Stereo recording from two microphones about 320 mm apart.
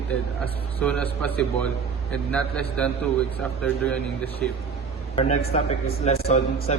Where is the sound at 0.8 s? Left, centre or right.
Centre.